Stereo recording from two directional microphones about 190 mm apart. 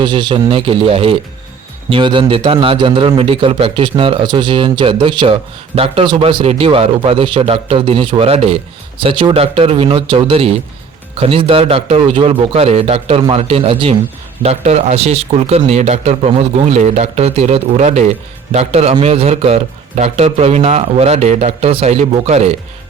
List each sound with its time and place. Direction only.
0.0 s a man's voice: 25° right (ahead or behind)